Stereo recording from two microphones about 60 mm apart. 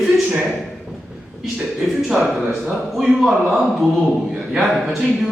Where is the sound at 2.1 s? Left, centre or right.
Centre.